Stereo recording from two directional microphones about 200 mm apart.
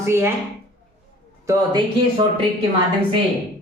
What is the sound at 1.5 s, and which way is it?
Speech, 20° right (ahead or behind).